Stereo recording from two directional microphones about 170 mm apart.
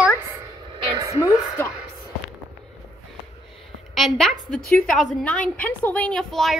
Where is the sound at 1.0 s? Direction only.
20° right (ahead or behind).